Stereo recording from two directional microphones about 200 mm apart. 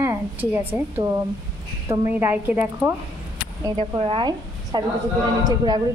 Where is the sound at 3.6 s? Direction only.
20° right (ahead or behind).